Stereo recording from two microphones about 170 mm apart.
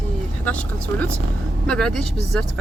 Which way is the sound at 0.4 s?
10° left (ahead or behind).